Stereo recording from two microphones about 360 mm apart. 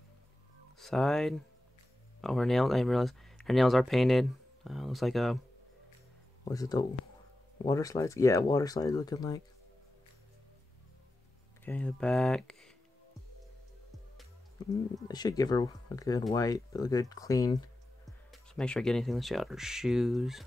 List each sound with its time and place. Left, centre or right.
0.7 s speech: centre
6.4 s speech: centre
11.6 s speech: centre
15.0 s speech: centre